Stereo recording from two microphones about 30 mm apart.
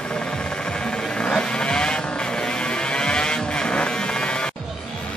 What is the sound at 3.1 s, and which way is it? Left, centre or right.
Vehicle, left.